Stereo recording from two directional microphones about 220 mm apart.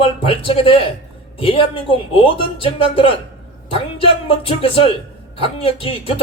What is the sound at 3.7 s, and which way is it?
Speech, 25° left (ahead or behind).